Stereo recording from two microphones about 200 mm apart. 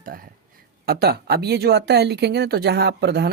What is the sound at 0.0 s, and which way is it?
Speech, 45° right (ahead or behind).